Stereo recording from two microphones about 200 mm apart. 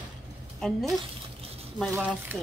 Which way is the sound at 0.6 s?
Centre (ahead or behind).